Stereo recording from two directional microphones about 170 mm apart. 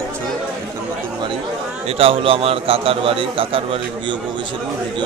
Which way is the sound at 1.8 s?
35° right (ahead or behind).